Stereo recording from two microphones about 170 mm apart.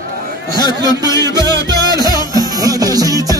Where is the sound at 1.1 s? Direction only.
20° left (ahead or behind).